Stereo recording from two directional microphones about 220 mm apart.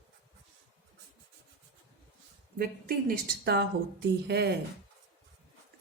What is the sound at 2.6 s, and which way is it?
A woman's voice, 40° right (ahead or behind).